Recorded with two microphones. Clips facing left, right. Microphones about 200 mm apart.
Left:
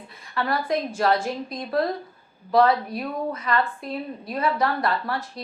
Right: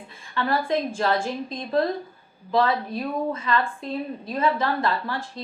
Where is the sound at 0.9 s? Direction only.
25° right (ahead or behind).